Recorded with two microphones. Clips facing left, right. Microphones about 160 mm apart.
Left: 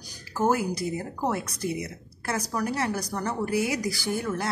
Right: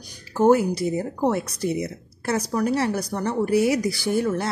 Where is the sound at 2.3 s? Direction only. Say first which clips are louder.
Right 6 dB; 30° right (ahead or behind).